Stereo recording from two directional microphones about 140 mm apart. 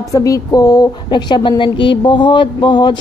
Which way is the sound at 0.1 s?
25° left (ahead or behind).